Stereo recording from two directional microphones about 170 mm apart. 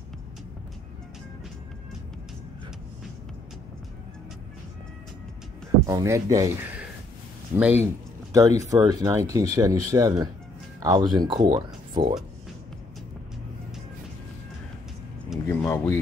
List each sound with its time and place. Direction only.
5.9 s speech: 20° right (ahead or behind)
15.6 s speech: 15° left (ahead or behind)